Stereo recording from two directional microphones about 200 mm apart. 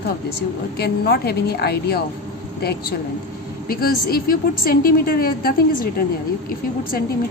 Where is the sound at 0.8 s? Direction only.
50° left (ahead or behind).